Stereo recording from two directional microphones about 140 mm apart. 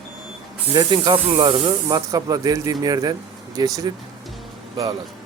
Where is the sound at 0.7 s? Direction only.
30° right (ahead or behind).